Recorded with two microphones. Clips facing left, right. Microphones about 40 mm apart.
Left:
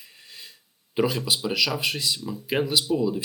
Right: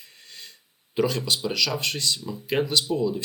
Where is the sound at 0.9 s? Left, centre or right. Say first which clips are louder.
Even; centre.